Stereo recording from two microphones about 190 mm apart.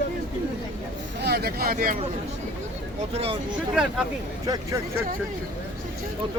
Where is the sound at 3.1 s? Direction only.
30° right (ahead or behind).